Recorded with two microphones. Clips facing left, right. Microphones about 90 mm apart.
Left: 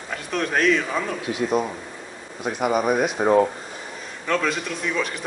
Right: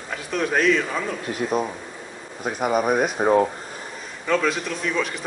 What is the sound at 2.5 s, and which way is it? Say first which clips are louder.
Speech: even; centre (ahead or behind).